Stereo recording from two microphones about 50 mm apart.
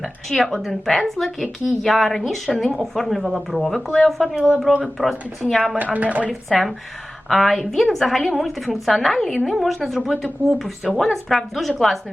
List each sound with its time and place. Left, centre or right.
0.3 s a woman's voice: centre
5.7 s speech: right
6.5 s a woman's voice: centre